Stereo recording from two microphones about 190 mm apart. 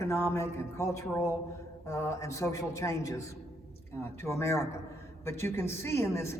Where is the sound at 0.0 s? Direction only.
15° left (ahead or behind).